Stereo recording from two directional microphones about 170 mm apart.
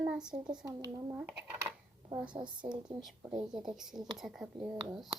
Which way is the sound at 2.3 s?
25° right (ahead or behind).